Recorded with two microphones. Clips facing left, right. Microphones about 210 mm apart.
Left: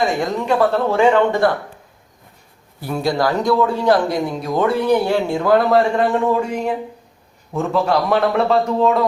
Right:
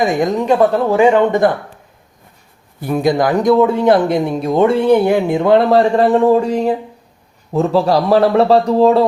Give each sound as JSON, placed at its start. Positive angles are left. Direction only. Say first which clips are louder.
{"t": 0.0, "sound": "speech", "louder": "right 4 dB", "side_deg": -20}
{"t": 2.8, "sound": "a man's voice", "louder": "right 5 dB", "side_deg": -20}